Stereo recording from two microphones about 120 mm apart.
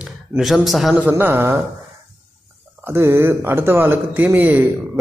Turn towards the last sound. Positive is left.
turn(degrees=-15)  # may be behind; listen again after turning